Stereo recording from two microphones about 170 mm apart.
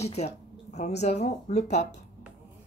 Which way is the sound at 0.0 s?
40° left (ahead or behind).